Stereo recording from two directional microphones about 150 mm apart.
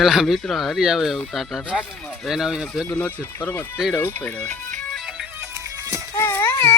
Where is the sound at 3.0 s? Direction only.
10° left (ahead or behind).